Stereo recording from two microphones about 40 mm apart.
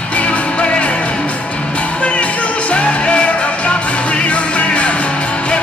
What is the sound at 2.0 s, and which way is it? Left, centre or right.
Music, left.